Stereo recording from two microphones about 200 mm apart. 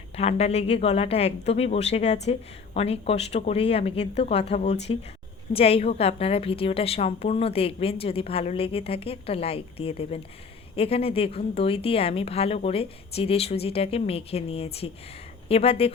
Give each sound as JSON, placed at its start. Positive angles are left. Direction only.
{"t": 0.2, "sound": "a woman's voice", "side_deg": 30}